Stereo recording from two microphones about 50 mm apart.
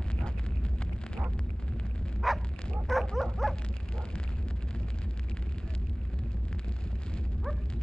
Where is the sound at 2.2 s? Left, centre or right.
Centre.